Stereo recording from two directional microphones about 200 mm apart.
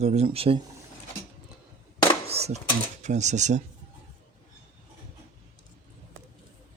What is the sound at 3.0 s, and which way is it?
Speech, 35° right (ahead or behind).